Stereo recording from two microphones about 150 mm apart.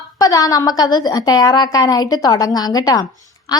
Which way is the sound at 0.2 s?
25° left (ahead or behind).